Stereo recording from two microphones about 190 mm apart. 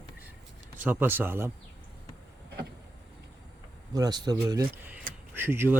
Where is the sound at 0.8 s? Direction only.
10° right (ahead or behind).